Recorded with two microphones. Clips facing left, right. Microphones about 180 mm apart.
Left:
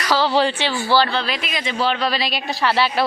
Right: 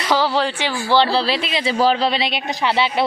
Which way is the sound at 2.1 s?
25° right (ahead or behind).